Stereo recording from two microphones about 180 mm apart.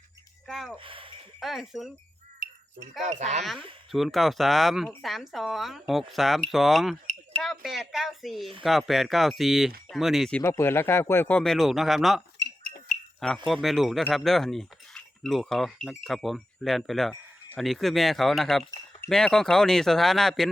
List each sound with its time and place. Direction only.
0.4 s speech: centre (ahead or behind)
0.8 s speech: 30° right (ahead or behind)
1.4 s speech: centre (ahead or behind)
2.4 s a sound: 50° right (ahead or behind)
3.0 s speech: 40° right (ahead or behind)
3.9 s speech: centre (ahead or behind)
10.4 s speech: 15° left (ahead or behind)